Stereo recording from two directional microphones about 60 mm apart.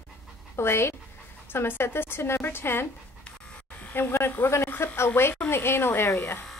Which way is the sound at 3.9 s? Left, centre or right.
Left.